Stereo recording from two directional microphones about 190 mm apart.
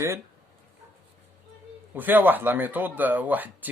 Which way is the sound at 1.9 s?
10° right (ahead or behind).